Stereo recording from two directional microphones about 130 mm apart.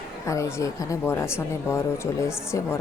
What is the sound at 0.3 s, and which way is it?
Speech, 25° left (ahead or behind).